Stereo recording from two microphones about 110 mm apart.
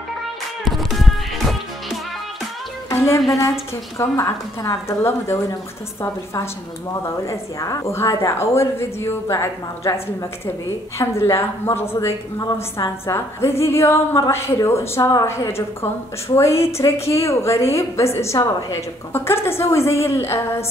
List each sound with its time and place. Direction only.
0.7 s music: centre (ahead or behind)
2.9 s music: 25° left (ahead or behind)
4.0 s a woman's voice: 25° left (ahead or behind)
6.9 s a woman's voice: 30° left (ahead or behind)